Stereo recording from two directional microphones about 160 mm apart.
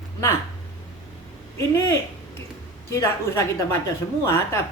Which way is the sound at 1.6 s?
20° left (ahead or behind).